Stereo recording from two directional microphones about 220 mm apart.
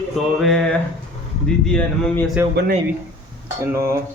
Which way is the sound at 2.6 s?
50° right (ahead or behind).